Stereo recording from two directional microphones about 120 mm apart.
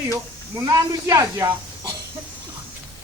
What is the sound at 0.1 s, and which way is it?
Speech, 25° right (ahead or behind).